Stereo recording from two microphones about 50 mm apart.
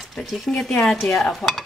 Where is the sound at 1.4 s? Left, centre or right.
Left.